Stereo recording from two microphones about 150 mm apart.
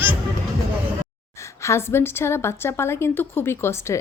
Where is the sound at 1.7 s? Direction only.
15° left (ahead or behind).